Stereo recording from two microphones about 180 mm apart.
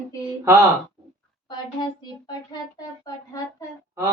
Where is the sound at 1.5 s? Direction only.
25° left (ahead or behind).